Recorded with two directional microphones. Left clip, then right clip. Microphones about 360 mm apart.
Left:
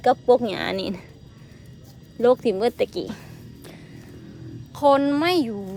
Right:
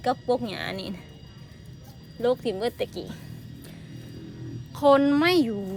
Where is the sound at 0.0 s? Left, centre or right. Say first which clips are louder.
Left 8 dB; centre.